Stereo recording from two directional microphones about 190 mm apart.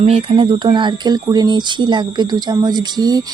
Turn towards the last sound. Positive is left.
turn(degrees=-20)  # may be behind; listen again after turning